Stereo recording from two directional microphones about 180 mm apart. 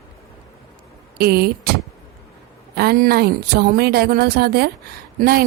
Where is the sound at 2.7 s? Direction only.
60° right (ahead or behind).